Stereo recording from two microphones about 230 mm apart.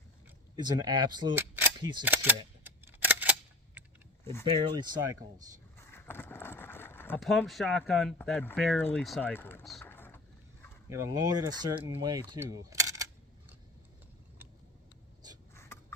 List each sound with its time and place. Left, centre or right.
0.5 s speech: centre
2.6 s a sound: centre
4.2 s speech: centre
4.6 s speech: centre
5.7 s speech: centre
10.8 s speech: centre
15.5 s a sound: centre